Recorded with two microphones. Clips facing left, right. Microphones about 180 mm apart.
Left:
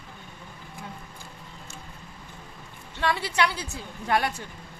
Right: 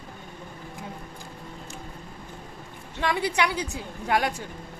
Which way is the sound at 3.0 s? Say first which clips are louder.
Right 1 dB; 15° right (ahead or behind).